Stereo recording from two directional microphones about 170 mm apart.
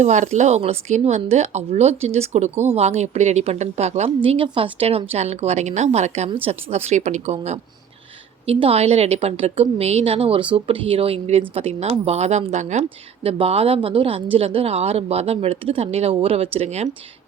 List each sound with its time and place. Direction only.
0.0 s speech: 45° right (ahead or behind)